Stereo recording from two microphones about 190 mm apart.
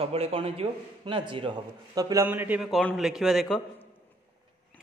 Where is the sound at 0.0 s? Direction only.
30° right (ahead or behind).